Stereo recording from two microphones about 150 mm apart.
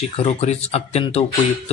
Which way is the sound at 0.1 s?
45° left (ahead or behind).